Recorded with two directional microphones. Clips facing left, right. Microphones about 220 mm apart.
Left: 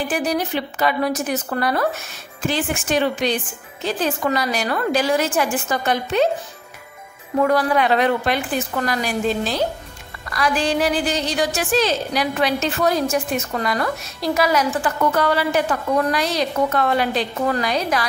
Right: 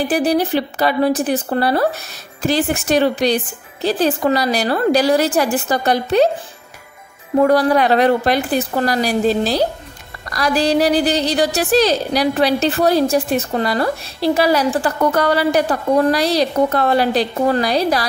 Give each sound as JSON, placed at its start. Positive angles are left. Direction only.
{"t": 0.1, "sound": "a woman's voice", "side_deg": -35}
{"t": 7.3, "sound": "a woman's voice", "side_deg": -35}